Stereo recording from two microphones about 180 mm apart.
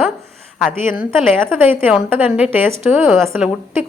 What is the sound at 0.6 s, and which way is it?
Speech, 50° left (ahead or behind).